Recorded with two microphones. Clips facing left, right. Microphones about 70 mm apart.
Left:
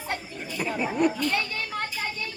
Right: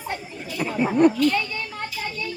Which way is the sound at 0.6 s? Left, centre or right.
Centre.